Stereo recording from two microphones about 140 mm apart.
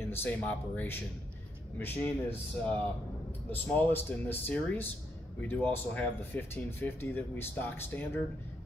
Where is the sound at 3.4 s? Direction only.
10° left (ahead or behind).